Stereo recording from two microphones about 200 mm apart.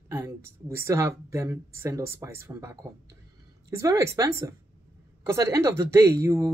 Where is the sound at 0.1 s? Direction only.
15° right (ahead or behind).